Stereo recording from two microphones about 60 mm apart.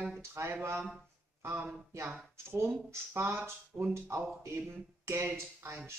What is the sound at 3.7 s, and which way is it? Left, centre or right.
Speech, right.